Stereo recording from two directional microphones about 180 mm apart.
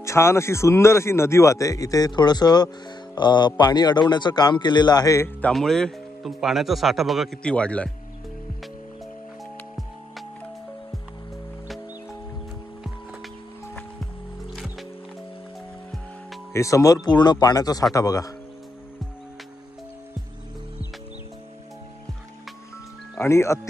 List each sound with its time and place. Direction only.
0.0 s a man's voice: 15° left (ahead or behind)
5.5 s speech: centre (ahead or behind)
14.5 s music: centre (ahead or behind)
16.5 s a man's voice: 15° left (ahead or behind)
23.1 s speech: 15° left (ahead or behind)